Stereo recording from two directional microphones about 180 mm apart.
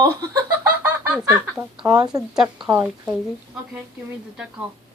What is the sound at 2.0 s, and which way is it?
Speech, 20° right (ahead or behind).